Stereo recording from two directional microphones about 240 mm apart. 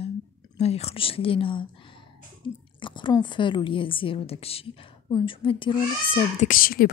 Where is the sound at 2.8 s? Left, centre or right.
Centre.